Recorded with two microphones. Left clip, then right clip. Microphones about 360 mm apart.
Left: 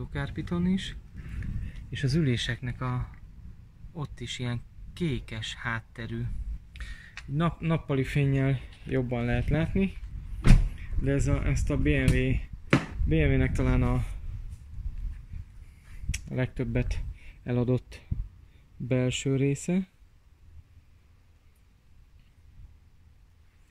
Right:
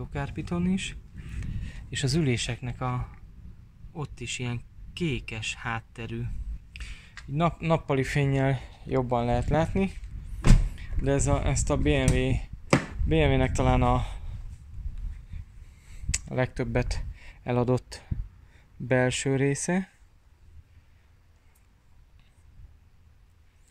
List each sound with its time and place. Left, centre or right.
0.0 s speech: centre
9.1 s speech: right
9.5 s speech: centre
16.3 s speech: centre